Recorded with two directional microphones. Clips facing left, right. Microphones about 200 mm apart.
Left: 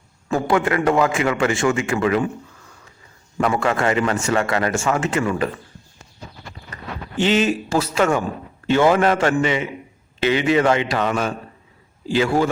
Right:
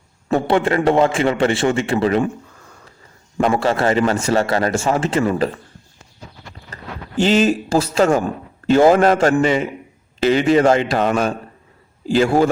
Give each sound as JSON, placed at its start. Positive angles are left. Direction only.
{"t": 0.3, "sound": "a man's voice", "side_deg": -30}
{"t": 3.4, "sound": "a man's voice", "side_deg": -30}
{"t": 7.2, "sound": "a man's voice", "side_deg": -35}
{"t": 10.8, "sound": "a man's voice", "side_deg": -45}